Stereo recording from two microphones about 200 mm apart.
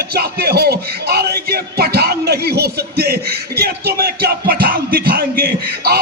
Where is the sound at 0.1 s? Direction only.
50° right (ahead or behind).